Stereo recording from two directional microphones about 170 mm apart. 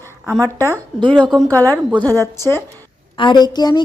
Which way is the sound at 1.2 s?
Centre (ahead or behind).